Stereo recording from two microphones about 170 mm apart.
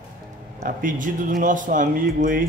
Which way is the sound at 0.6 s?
55° right (ahead or behind).